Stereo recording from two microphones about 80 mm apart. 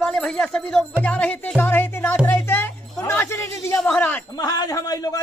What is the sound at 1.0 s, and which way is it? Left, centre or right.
Music, centre.